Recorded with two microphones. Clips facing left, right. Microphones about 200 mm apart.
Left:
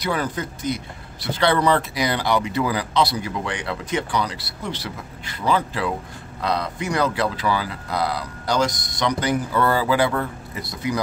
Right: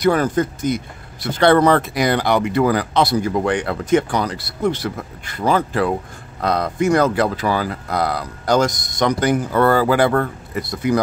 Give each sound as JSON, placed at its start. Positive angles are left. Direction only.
{"t": 0.0, "sound": "speech", "side_deg": -50}